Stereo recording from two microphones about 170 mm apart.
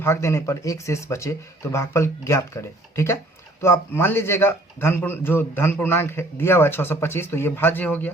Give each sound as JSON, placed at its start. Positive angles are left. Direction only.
{"t": 0.0, "sound": "a man's voice", "side_deg": 15}